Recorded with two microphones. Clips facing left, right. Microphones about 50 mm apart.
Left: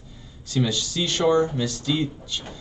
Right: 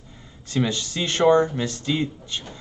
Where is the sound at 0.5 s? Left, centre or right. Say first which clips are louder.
Even; right.